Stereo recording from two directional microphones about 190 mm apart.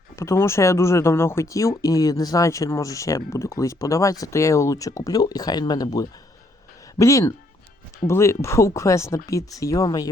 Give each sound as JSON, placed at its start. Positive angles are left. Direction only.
{"t": 0.2, "sound": "speech", "side_deg": 15}